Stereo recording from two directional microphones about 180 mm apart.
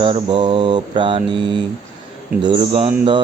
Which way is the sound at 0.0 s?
30° right (ahead or behind).